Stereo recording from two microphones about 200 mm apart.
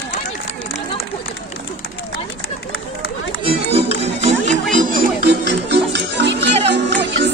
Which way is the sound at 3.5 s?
30° right (ahead or behind).